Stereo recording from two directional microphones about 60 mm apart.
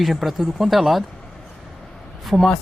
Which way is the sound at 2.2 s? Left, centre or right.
Centre.